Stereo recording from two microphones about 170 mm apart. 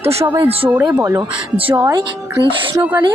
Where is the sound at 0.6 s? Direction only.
5° right (ahead or behind).